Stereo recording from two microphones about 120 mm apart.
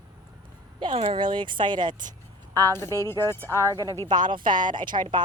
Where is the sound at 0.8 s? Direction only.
50° right (ahead or behind).